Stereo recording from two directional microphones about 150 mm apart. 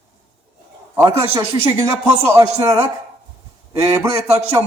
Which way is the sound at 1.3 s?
20° right (ahead or behind).